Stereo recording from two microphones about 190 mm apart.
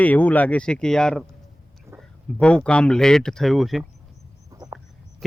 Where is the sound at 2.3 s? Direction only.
5° left (ahead or behind).